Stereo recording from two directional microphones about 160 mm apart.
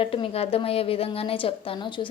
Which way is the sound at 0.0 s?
35° left (ahead or behind).